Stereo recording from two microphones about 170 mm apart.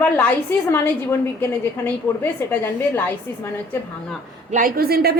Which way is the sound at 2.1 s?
10° left (ahead or behind).